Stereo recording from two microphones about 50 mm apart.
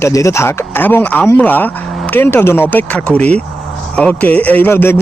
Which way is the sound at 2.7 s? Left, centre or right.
Left.